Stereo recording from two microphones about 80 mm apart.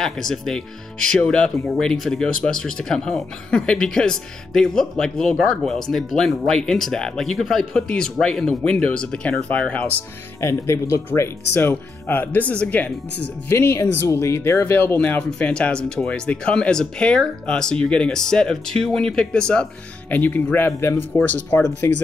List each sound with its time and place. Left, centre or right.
0.0 s speech: centre
10.4 s speech: left; by 13.6 s centre
13.6 s speech: left
14.7 s speech: left
15.0 s speech: centre
20.2 s speech: left
21.8 s speech: left